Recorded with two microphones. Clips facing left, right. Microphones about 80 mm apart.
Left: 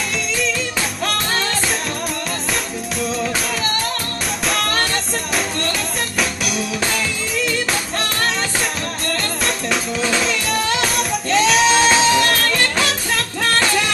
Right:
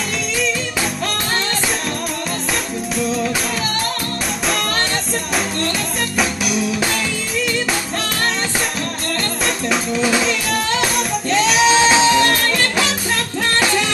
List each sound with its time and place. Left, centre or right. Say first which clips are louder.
6.1 s music: right 3 dB; centre
9.9 s drum kit: right 3 dB; centre
10.8 s music: right 1 dB; centre
11.7 s music: right 1 dB; centre